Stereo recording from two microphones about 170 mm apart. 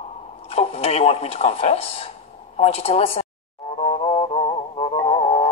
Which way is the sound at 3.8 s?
35° left (ahead or behind).